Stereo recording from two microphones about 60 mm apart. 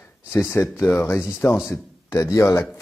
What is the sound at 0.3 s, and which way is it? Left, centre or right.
Speech, left.